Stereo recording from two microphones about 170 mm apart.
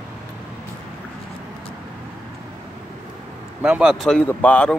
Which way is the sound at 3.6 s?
5° right (ahead or behind).